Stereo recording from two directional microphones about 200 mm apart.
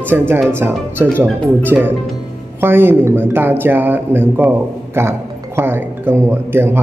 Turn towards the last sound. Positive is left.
turn(degrees=-10)  # may be behind; listen again after turning